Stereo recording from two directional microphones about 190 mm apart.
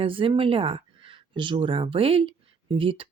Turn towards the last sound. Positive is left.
turn(degrees=-30)  # may be behind; listen again after turning